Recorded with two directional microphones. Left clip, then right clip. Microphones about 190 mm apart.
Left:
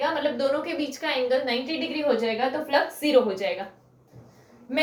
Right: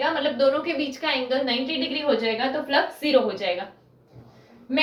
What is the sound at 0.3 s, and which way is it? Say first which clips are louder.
A woman's voice: right 4 dB; 25° left (ahead or behind).